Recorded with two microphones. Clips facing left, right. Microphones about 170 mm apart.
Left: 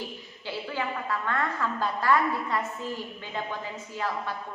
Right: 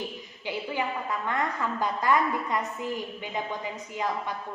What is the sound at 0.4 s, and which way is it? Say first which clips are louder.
A woman's voice: right 2 dB; 15° right (ahead or behind).